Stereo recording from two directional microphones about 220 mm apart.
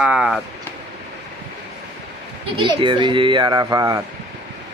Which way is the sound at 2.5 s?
20° right (ahead or behind).